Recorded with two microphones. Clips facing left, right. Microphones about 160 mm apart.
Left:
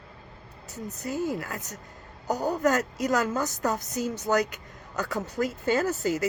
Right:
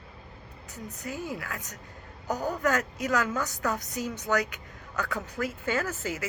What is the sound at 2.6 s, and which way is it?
Speech, 40° left (ahead or behind).